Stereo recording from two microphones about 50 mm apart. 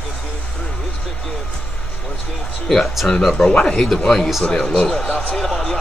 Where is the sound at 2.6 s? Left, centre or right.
Centre.